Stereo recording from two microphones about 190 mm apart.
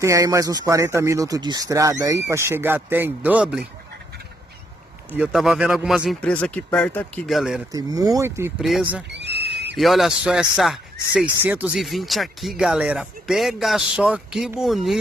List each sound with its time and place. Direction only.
0.0 s speech: 15° right (ahead or behind)
5.1 s speech: 5° right (ahead or behind)
7.7 s speech: 20° right (ahead or behind)
8.5 s speech: centre (ahead or behind)
9.1 s a sound: 60° right (ahead or behind)
9.8 s speech: centre (ahead or behind)